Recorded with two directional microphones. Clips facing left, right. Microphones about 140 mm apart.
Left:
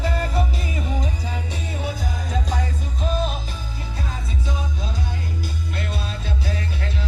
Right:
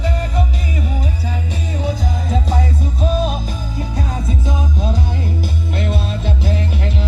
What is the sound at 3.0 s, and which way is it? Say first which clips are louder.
Music: right 5 dB; 35° right (ahead or behind).